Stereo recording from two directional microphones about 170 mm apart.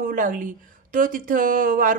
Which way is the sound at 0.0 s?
50° right (ahead or behind).